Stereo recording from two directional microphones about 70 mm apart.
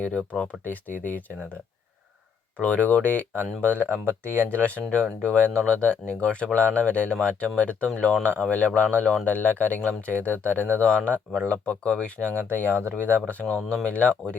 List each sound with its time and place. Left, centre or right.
0.0 s speech: centre
2.6 s speech: centre
3.9 s speech: right
4.6 s speech: centre